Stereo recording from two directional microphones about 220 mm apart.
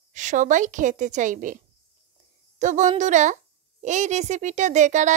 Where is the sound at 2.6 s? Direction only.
35° right (ahead or behind).